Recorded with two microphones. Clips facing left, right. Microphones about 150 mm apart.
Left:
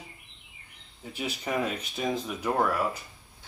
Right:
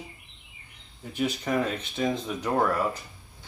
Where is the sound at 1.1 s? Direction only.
10° left (ahead or behind).